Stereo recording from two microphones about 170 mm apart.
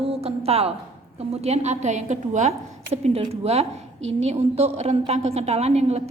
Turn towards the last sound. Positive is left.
turn(degrees=-40)  # may be behind; listen again after turning